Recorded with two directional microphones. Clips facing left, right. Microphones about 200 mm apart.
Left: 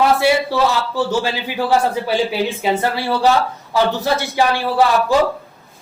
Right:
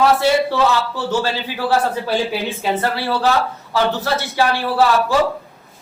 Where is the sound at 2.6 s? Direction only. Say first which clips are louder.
Left 2 dB; 15° left (ahead or behind).